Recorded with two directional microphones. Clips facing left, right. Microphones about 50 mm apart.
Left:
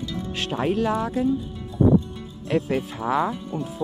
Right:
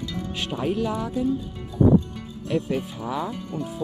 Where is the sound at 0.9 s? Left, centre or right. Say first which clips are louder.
Left 3 dB; left.